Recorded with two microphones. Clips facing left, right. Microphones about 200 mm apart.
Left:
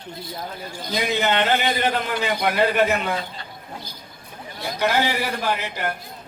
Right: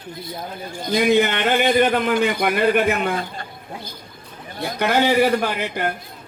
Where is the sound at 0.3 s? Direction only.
55° right (ahead or behind).